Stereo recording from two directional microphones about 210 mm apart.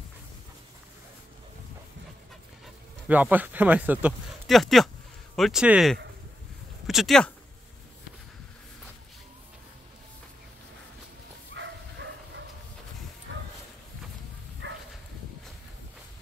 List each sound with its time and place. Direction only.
2.6 s speech: 10° right (ahead or behind)
11.5 s bow-wow: 60° right (ahead or behind)
13.3 s dog: 65° right (ahead or behind)
14.6 s dog: 60° right (ahead or behind)